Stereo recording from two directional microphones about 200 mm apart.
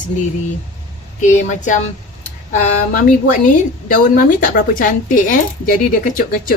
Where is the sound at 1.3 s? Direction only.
35° left (ahead or behind).